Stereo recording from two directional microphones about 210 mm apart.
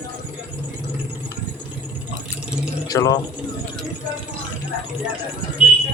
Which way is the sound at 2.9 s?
15° left (ahead or behind).